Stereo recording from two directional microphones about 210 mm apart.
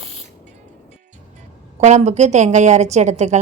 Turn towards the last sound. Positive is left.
turn(degrees=-35)  # may be behind; listen again after turning